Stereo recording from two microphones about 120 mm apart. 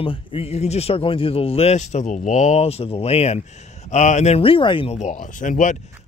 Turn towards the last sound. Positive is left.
turn(degrees=90)